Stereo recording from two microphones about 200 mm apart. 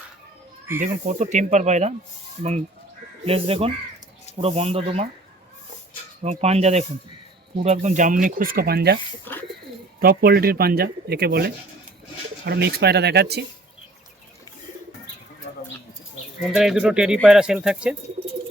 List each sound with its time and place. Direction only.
0.8 s speech: 35° right (ahead or behind)
3.2 s speech: 30° right (ahead or behind)
6.2 s speech: 30° right (ahead or behind); by 9.0 s 50° right (ahead or behind)
9.3 s bird: 10° left (ahead or behind)
10.0 s speech: 45° right (ahead or behind)
16.4 s speech: centre (ahead or behind)